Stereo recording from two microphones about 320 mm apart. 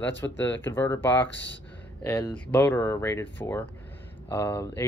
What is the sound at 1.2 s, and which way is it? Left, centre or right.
Speech, left.